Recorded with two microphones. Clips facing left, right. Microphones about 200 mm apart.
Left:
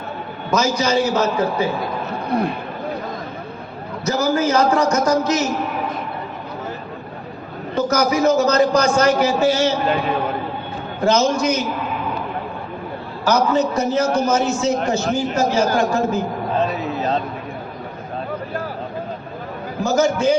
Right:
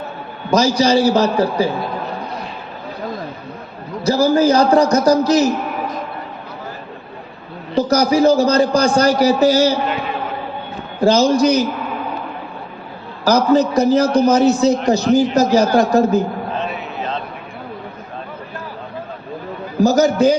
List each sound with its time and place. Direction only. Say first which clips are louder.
0.5 s a man's voice: right 4 dB; 35° right (ahead or behind)
2.3 s a sound: left 10 dB; 60° left (ahead or behind)
4.0 s a man's voice: right 5 dB; 30° right (ahead or behind)
7.8 s a man's voice: right 4 dB; 35° right (ahead or behind)
11.0 s a man's voice: right 4 dB; 35° right (ahead or behind)
13.2 s a man's voice: right 4 dB; 35° right (ahead or behind)
16.6 s a sound: left 4 dB; 40° left (ahead or behind)
19.8 s a man's voice: right 5 dB; 35° right (ahead or behind)